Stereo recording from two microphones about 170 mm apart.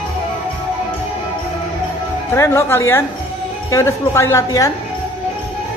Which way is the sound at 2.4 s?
15° left (ahead or behind).